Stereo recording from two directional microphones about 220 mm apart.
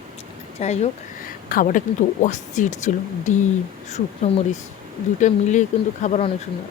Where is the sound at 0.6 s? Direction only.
30° left (ahead or behind).